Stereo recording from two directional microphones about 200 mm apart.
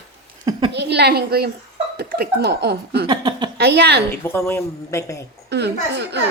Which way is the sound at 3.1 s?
20° right (ahead or behind).